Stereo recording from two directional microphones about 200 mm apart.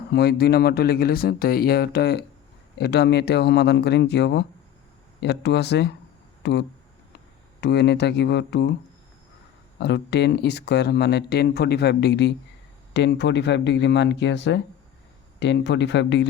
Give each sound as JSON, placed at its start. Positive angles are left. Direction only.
{"t": 0.1, "sound": "speech", "side_deg": 55}
{"t": 9.8, "sound": "speech", "side_deg": 55}